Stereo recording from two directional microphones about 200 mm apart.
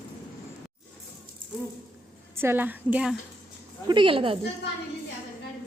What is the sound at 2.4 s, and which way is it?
Speech, 10° right (ahead or behind).